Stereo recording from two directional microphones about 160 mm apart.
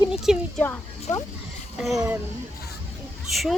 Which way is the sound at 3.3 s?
Centre (ahead or behind).